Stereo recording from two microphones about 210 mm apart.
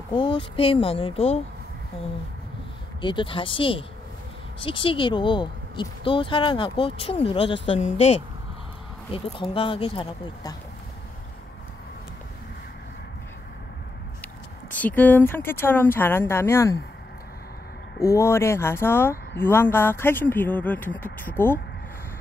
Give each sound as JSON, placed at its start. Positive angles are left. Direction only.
{"t": 0.1, "sound": "speech", "side_deg": 25}
{"t": 3.0, "sound": "speech", "side_deg": 20}
{"t": 9.1, "sound": "speech", "side_deg": 25}
{"t": 14.7, "sound": "speech", "side_deg": 5}
{"t": 18.1, "sound": "speech", "side_deg": 10}